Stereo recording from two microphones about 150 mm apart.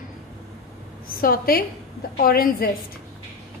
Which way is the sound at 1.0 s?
75° left (ahead or behind).